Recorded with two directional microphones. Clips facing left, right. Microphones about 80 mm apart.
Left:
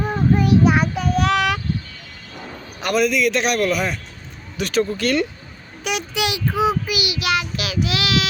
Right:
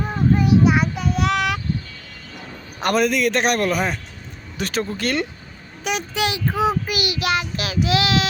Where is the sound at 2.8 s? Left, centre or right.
Right.